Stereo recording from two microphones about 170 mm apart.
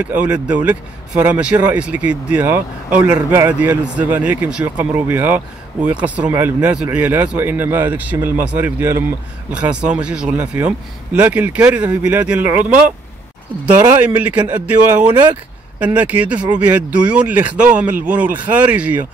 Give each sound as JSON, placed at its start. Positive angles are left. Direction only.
{"t": 0.0, "sound": "speech", "side_deg": -10}